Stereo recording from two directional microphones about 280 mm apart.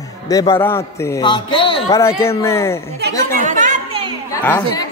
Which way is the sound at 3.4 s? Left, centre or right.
Right.